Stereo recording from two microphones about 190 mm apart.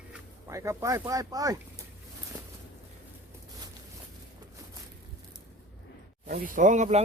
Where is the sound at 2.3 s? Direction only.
20° right (ahead or behind).